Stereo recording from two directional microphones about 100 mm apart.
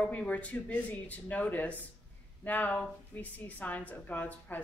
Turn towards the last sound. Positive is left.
turn(degrees=15)  # may be behind; listen again after turning